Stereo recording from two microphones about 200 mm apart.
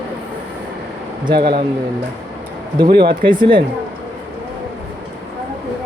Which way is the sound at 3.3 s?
25° right (ahead or behind).